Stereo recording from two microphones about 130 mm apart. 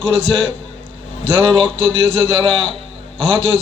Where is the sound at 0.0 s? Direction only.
45° right (ahead or behind).